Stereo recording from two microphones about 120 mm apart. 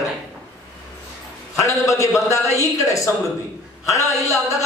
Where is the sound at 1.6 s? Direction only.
25° left (ahead or behind).